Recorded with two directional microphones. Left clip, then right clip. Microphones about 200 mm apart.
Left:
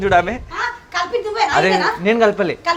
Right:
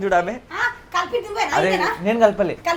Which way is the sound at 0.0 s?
50° left (ahead or behind).